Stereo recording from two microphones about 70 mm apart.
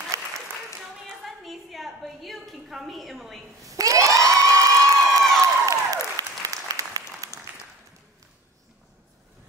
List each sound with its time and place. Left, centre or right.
0.1 s applause: right
1.0 s a sound: centre
3.6 s crowd: right
5.7 s applause: right